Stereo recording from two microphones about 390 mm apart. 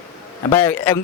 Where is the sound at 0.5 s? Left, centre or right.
Centre.